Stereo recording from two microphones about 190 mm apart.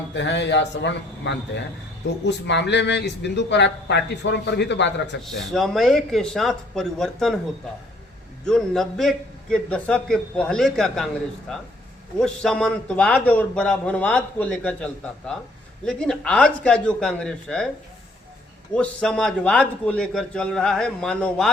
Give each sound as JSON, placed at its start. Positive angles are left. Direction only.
{"t": 0.1, "sound": "a man's voice", "side_deg": 70}
{"t": 5.2, "sound": "a man's voice", "side_deg": 0}
{"t": 8.4, "sound": "a man's voice", "side_deg": 0}
{"t": 15.9, "sound": "a man's voice", "side_deg": 5}
{"t": 18.7, "sound": "a man's voice", "side_deg": 5}